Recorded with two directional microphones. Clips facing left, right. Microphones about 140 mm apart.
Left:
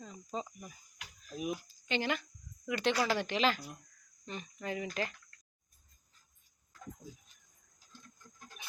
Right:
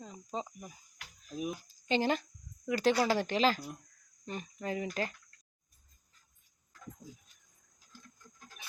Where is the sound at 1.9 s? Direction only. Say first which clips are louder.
Right 4 dB; 35° right (ahead or behind).